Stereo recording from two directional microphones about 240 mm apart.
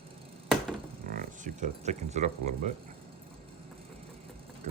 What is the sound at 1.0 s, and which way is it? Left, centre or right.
Speech, right.